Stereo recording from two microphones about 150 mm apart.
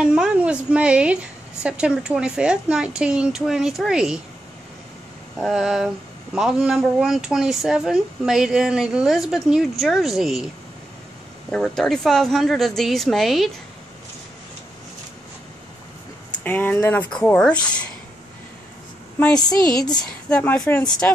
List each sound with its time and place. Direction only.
0.0 s a woman's voice: 5° right (ahead or behind)
5.4 s speech: centre (ahead or behind)
11.5 s speech: 5° left (ahead or behind)
16.4 s speech: 10° left (ahead or behind)
19.1 s a woman's voice: 10° left (ahead or behind)
19.8 s a woman's voice: 25° left (ahead or behind)
20.2 s speech: 10° left (ahead or behind)